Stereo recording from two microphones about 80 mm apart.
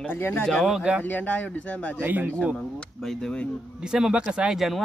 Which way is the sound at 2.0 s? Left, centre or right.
Right.